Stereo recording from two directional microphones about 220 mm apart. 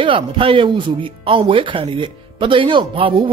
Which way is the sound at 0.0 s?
25° right (ahead or behind).